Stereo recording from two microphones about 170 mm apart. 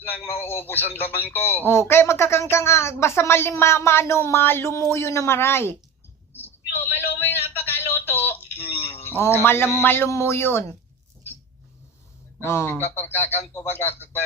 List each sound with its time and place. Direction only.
0.6 s speech: 10° left (ahead or behind)
6.3 s a sound: 10° left (ahead or behind)
9.4 s speech: 15° left (ahead or behind)
12.5 s speech: 15° left (ahead or behind)